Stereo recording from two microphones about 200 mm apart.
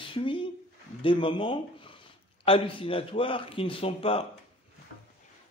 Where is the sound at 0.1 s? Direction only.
25° left (ahead or behind).